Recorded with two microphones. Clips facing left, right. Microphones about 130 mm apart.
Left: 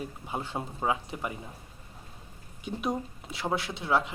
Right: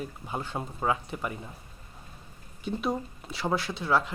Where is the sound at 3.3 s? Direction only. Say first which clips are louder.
Right 2 dB; 20° left (ahead or behind).